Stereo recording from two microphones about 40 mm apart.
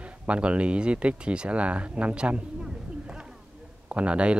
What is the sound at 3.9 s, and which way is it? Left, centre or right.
Speech, right.